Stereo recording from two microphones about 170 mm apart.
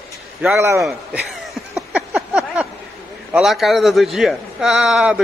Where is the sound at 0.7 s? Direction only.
Centre (ahead or behind).